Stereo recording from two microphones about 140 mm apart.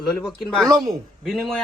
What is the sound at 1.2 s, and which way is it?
Speech, centre (ahead or behind).